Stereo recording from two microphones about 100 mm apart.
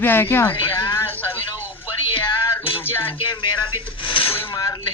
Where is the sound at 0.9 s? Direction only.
20° left (ahead or behind).